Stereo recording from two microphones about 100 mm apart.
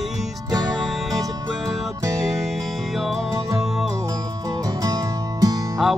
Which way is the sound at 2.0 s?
35° right (ahead or behind).